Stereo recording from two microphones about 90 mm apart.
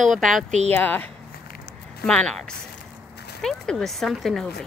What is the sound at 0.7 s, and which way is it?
Speech, 20° left (ahead or behind).